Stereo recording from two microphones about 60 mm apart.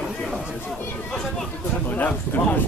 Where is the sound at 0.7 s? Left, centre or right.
Centre.